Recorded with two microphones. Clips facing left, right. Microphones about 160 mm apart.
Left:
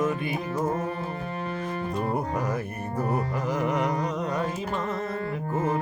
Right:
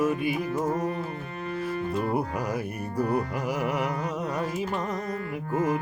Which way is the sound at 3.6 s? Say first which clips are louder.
Left 3 dB; 10° right (ahead or behind).